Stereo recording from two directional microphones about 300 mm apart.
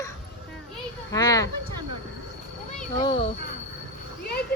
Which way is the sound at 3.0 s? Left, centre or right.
Centre.